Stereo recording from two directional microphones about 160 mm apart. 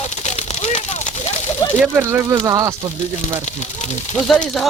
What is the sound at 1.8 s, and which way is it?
Speech, 10° right (ahead or behind).